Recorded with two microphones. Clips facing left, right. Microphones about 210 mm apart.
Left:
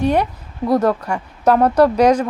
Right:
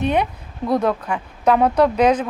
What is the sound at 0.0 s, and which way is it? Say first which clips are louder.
Speech: left 3 dB; 10° left (ahead or behind).